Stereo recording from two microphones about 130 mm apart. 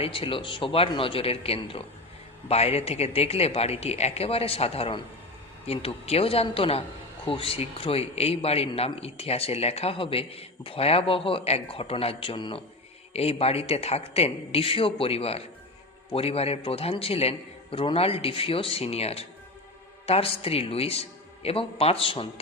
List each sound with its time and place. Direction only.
0.0 s a man's voice: 45° left (ahead or behind)